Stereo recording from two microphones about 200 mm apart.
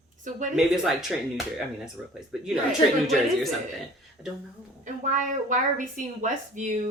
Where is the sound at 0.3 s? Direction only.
40° right (ahead or behind).